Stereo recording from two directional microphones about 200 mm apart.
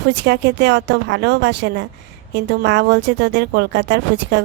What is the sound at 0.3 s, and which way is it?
Speech, 55° right (ahead or behind).